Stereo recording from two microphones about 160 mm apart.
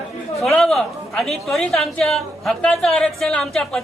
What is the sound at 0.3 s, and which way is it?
A woman's voice, centre (ahead or behind).